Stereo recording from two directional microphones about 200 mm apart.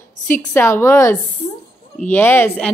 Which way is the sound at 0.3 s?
10° left (ahead or behind).